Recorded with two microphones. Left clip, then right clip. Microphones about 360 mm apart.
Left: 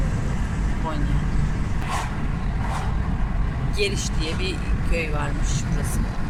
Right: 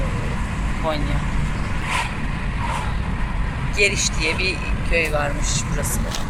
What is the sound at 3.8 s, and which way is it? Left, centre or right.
Speech, centre.